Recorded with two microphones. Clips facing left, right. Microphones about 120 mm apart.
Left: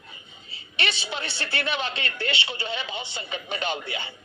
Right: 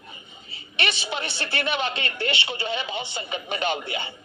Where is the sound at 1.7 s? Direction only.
55° right (ahead or behind).